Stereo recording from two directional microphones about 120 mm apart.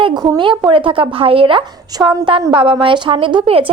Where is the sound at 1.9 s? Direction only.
35° right (ahead or behind).